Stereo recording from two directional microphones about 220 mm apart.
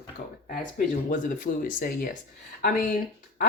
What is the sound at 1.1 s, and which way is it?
Speech, 40° left (ahead or behind).